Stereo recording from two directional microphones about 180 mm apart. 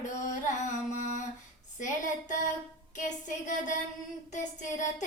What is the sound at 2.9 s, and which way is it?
Speech, 45° left (ahead or behind).